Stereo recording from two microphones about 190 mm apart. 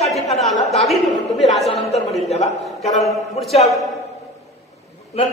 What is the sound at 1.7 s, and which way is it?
Speech, 35° left (ahead or behind).